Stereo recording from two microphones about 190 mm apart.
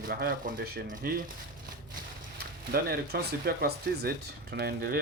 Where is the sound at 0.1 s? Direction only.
50° right (ahead or behind).